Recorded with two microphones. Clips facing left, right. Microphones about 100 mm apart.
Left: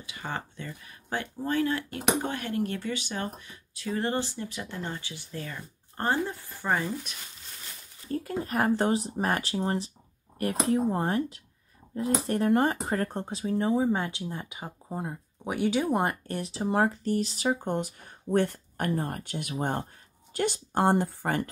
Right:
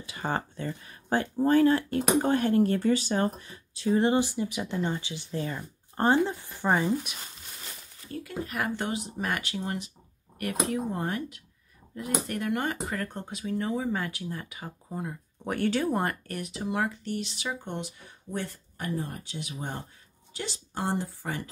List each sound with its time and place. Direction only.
0.0 s speech: 35° right (ahead or behind); by 7.2 s 15° right (ahead or behind)
8.1 s speech: 40° left (ahead or behind)
15.4 s speech: 10° left (ahead or behind); by 21.5 s 55° left (ahead or behind)